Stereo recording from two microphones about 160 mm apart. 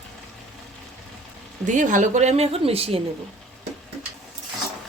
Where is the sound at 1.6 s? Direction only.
50° right (ahead or behind).